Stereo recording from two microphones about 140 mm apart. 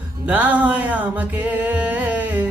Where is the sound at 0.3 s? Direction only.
10° right (ahead or behind).